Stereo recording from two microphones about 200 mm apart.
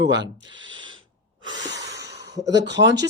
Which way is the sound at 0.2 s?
65° right (ahead or behind).